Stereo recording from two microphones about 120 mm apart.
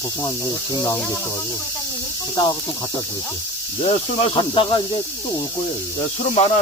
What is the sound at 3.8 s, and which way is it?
Speech, 55° left (ahead or behind).